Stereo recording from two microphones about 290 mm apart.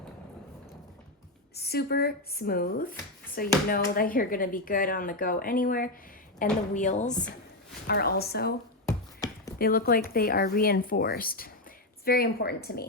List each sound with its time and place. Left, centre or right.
1.5 s speech: left
8.9 s beatboxing: centre
9.6 s speech: left